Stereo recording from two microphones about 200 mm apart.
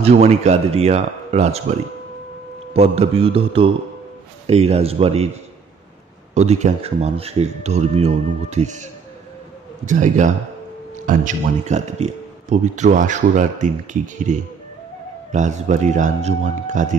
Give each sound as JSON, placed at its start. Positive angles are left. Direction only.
{"t": 0.0, "sound": "a man's voice", "side_deg": -30}
{"t": 9.8, "sound": "a man's voice", "side_deg": -40}